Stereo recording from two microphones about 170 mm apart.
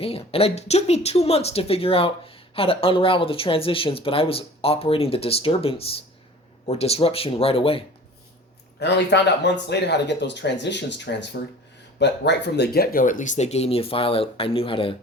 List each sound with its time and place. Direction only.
0.0 s speech: 35° left (ahead or behind)
8.8 s speech: 85° left; by 14.9 s 30° left (ahead or behind)